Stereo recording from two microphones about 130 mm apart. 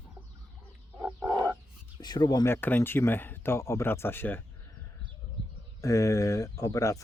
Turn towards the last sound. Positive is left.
turn(degrees=25)  # may be behind; listen again after turning